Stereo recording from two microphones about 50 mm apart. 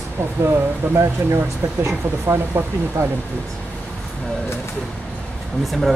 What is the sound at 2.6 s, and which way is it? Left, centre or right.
Speech, right.